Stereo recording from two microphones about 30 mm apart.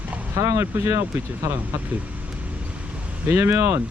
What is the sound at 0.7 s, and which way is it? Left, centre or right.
Speech, right.